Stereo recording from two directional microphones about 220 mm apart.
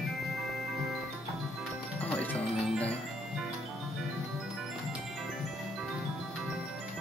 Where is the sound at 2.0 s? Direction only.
5° left (ahead or behind).